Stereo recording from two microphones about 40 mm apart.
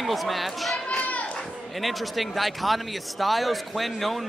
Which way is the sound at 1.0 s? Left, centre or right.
Left.